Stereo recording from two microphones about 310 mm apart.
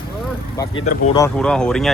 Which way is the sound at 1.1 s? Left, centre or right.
Centre.